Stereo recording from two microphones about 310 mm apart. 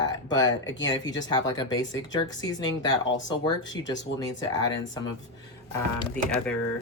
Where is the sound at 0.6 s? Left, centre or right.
Left.